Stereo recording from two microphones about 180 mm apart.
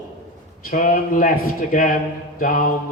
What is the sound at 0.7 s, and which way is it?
A man's voice, 50° left (ahead or behind).